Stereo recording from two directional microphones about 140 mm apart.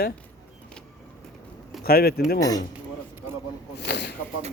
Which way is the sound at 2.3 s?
25° left (ahead or behind).